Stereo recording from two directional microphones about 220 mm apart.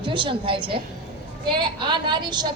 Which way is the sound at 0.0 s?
20° right (ahead or behind).